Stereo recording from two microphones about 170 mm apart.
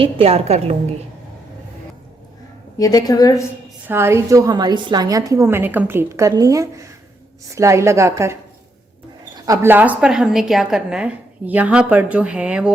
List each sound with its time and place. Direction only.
0.0 s a woman's voice: 35° right (ahead or behind)
2.7 s a woman's voice: 20° left (ahead or behind)
3.8 s a woman's voice: 15° right (ahead or behind)
9.5 s a woman's voice: 15° right (ahead or behind)